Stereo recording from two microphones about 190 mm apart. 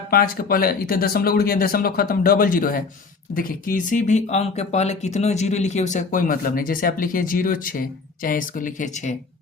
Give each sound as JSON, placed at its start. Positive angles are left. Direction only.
{"t": 0.1, "sound": "speech", "side_deg": 50}